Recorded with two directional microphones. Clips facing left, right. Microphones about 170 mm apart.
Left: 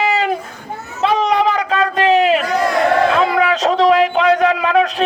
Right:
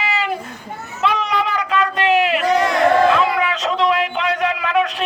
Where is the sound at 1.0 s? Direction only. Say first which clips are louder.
Left 5 dB; 35° left (ahead or behind).